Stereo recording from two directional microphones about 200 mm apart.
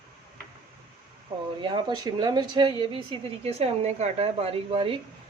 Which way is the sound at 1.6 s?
20° right (ahead or behind).